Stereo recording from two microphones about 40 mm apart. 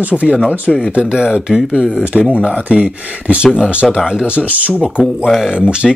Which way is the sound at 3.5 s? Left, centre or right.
Centre.